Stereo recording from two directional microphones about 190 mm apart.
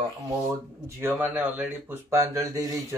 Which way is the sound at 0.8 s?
15° right (ahead or behind).